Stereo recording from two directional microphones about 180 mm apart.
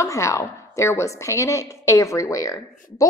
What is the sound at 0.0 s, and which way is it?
A woman's voice, 15° left (ahead or behind).